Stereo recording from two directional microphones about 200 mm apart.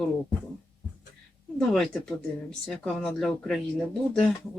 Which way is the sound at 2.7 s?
5° left (ahead or behind).